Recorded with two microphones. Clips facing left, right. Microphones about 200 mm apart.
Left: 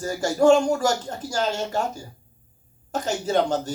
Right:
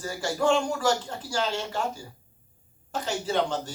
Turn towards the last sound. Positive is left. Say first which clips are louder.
# left 5 dB
turn(degrees=45)  # may be behind; listen again after turning